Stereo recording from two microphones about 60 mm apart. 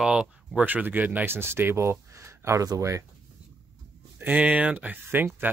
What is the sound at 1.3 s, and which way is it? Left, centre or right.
Speech, right.